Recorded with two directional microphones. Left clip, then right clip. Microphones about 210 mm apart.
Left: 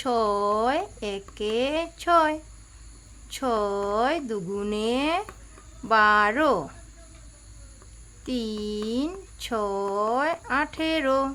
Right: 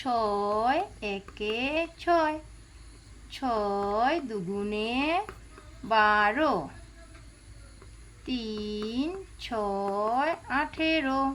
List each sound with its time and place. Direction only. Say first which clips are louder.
0.0 s speech: left 4 dB; 40° left (ahead or behind)
8.3 s speech: left 4 dB; 40° left (ahead or behind)